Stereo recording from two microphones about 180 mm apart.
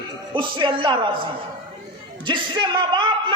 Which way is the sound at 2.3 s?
25° right (ahead or behind).